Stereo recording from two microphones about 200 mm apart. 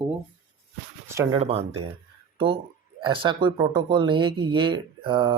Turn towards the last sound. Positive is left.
turn(degrees=-25)  # may be behind; listen again after turning